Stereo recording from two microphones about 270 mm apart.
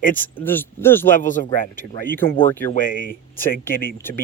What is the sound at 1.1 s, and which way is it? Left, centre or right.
Speech, left.